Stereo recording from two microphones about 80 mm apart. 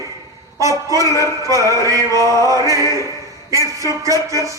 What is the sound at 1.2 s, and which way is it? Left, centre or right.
Speech, right.